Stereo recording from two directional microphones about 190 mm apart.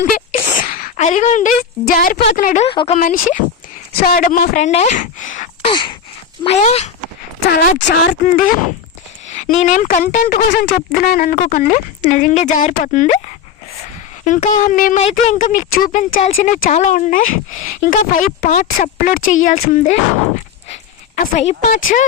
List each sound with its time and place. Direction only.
0.0 s a sound: 40° left (ahead or behind)
2.0 s a woman's voice: 50° left (ahead or behind)
2.6 s a woman's voice: 30° left (ahead or behind)
5.7 s a sound: 25° left (ahead or behind)
6.4 s a woman's voice: 35° left (ahead or behind)
7.4 s speech: 50° left (ahead or behind); by 8.1 s 70° left (ahead or behind)
9.3 s a woman's voice: 40° left (ahead or behind)
21.2 s speech: 40° left (ahead or behind)